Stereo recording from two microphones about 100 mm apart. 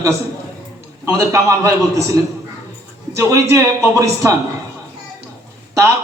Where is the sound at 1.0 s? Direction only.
30° right (ahead or behind).